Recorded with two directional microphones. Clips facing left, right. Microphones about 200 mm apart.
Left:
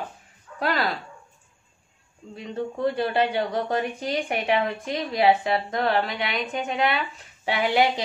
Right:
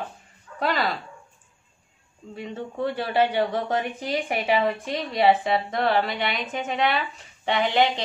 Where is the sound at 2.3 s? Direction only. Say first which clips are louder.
Left 2 dB; 5° right (ahead or behind).